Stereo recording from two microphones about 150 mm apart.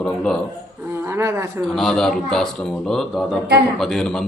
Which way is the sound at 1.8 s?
5° left (ahead or behind).